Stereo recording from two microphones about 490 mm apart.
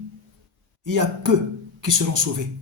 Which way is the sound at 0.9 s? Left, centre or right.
Right.